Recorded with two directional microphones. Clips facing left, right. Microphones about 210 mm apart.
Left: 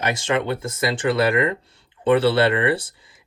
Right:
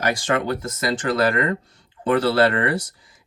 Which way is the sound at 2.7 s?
30° left (ahead or behind).